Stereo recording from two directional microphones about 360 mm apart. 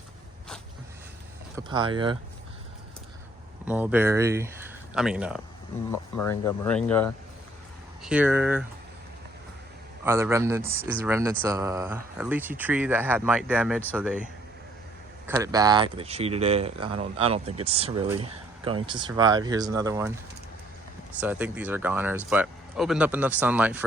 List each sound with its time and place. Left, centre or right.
1.5 s speech: centre
3.7 s speech: centre
10.0 s speech: centre
15.3 s speech: centre
21.2 s speech: centre